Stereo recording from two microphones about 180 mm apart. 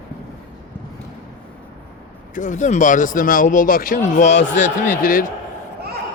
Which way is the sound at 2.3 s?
45° left (ahead or behind).